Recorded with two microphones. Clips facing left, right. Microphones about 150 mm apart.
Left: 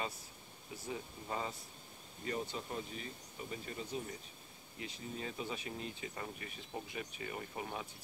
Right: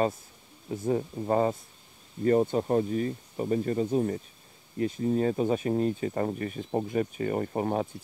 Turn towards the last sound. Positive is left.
turn(degrees=-50)  # may be behind; listen again after turning